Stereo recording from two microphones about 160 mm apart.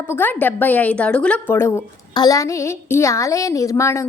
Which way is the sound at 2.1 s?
25° left (ahead or behind).